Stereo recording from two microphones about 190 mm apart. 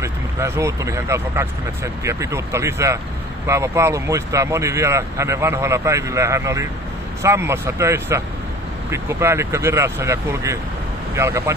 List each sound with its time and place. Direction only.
0.0 s speech: 15° right (ahead or behind)